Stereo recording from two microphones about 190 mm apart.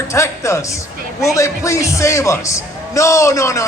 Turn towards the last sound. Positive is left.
turn(degrees=15)  # may be behind; listen again after turning